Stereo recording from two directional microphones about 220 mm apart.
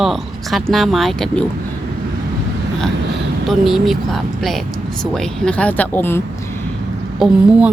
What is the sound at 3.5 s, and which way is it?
Speech, centre (ahead or behind).